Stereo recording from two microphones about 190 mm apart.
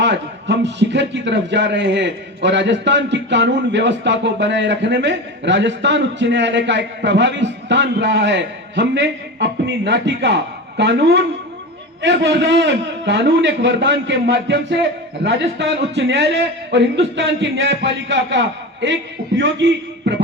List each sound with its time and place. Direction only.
0.0 s a man's voice: 65° right (ahead or behind)